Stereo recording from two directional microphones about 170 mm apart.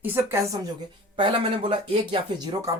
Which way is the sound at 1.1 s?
30° right (ahead or behind).